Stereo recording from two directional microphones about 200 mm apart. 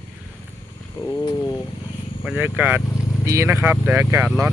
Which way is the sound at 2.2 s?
5° right (ahead or behind).